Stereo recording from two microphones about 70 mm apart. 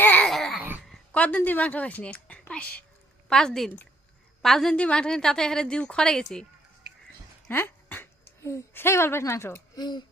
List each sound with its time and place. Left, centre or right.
0.3 s babbling: centre
1.1 s a sound: centre
1.5 s a woman's voice: left
7.4 s a sound: left
8.7 s a woman's voice: left
9.7 s speech: left